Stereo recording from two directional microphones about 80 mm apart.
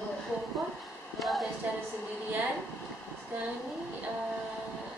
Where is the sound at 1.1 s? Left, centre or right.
Centre.